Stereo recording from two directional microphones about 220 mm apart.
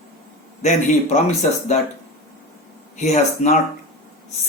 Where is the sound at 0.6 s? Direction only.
30° left (ahead or behind).